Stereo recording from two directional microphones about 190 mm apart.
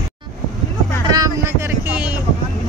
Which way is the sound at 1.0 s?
20° right (ahead or behind).